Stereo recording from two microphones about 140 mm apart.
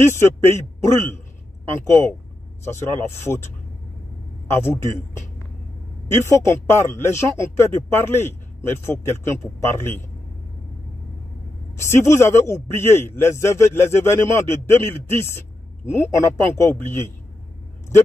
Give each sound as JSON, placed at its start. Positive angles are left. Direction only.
{"t": 0.0, "sound": "a man's voice", "side_deg": 20}
{"t": 1.9, "sound": "a man's voice", "side_deg": 15}
{"t": 4.5, "sound": "a man's voice", "side_deg": 15}
{"t": 6.3, "sound": "a man's voice", "side_deg": 20}
{"t": 11.8, "sound": "a man's voice", "side_deg": 20}